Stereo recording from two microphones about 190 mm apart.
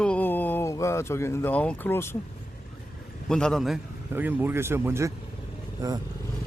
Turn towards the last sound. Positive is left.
turn(degrees=-20)  # may be behind; listen again after turning